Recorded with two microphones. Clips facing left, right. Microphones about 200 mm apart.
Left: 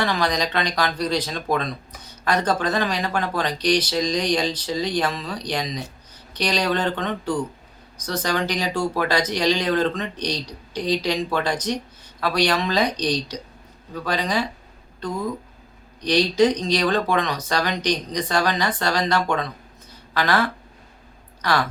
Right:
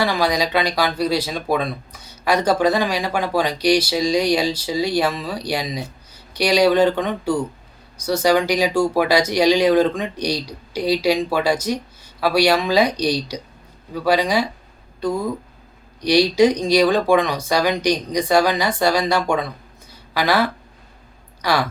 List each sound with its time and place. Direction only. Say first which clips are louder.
0.0 s speech: right 3 dB; 10° right (ahead or behind)
16.0 s speech: right 4 dB; 10° right (ahead or behind)